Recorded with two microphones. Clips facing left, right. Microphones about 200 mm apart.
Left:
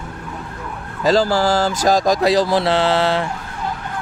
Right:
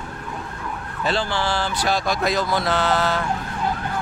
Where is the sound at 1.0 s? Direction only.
40° left (ahead or behind).